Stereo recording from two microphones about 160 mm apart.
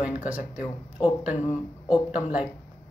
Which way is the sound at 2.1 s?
5° right (ahead or behind).